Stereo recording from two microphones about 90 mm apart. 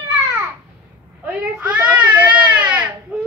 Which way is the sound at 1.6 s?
15° right (ahead or behind).